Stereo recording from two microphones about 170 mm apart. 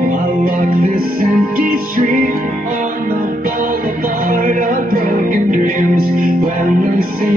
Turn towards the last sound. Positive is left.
turn(degrees=-55)  # may be behind; listen again after turning